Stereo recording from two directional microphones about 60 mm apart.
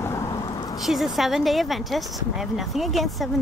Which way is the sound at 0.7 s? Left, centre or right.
Centre.